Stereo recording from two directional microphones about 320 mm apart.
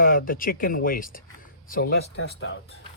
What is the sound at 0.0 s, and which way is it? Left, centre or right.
Speech, left.